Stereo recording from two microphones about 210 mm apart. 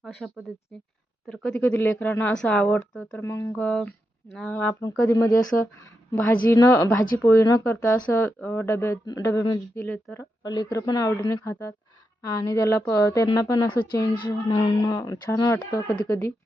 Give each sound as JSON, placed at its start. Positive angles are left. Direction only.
{"t": 0.2, "sound": "a woman's voice", "side_deg": 0}
{"t": 4.7, "sound": "a woman's voice", "side_deg": 20}
{"t": 10.4, "sound": "a woman's voice", "side_deg": 20}